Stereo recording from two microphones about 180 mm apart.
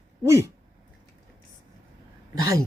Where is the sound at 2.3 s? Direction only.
20° right (ahead or behind).